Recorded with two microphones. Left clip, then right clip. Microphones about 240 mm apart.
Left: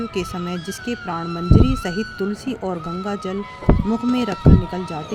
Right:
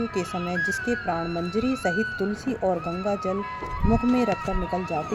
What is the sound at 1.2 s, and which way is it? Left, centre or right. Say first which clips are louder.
Speech: left 5 dB; left.